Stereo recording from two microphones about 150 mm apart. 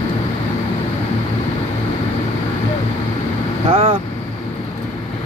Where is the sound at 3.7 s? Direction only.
40° right (ahead or behind).